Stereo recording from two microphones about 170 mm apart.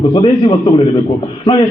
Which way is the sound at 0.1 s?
30° left (ahead or behind).